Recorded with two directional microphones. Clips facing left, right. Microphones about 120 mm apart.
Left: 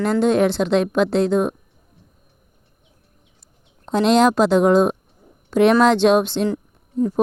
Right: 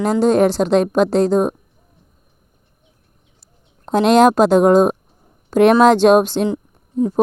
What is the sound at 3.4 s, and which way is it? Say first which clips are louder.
A woman's voice: right 4 dB; 45° right (ahead or behind).